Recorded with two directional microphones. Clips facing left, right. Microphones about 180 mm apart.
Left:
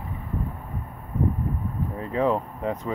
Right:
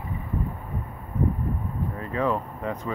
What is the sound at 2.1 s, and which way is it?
Speech, 20° left (ahead or behind).